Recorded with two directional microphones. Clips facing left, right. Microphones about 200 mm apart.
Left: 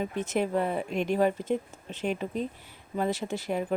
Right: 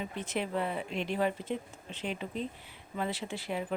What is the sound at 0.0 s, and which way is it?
Speech, 45° left (ahead or behind).